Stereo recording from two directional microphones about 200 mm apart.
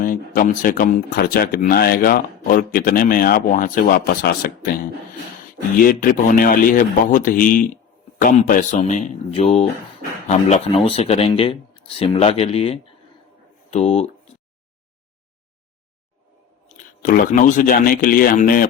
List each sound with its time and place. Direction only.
0.0 s speech: 45° left (ahead or behind)
5.8 s speech: 45° left (ahead or behind)
16.6 s speech: 40° left (ahead or behind)